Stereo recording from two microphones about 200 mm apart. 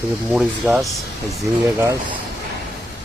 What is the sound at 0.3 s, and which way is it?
Speech, centre (ahead or behind).